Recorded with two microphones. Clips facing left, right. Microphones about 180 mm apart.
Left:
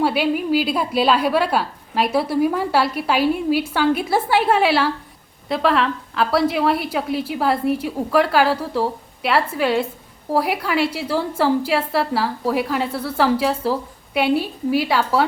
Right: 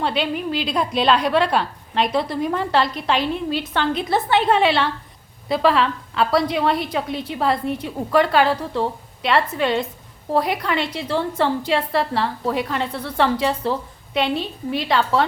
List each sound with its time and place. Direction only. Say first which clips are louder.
0.0 s a woman's voice: left 4 dB; 5° left (ahead or behind)